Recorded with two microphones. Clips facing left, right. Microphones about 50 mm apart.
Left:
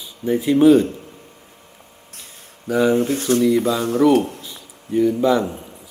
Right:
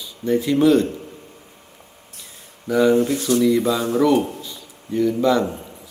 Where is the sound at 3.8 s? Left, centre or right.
Right.